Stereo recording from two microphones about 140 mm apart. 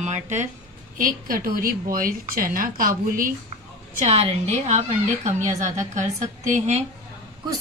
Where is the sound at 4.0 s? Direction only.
45° right (ahead or behind).